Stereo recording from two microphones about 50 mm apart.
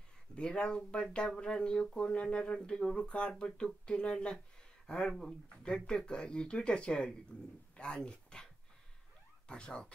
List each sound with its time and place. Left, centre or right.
0.4 s speech: centre
9.5 s speech: centre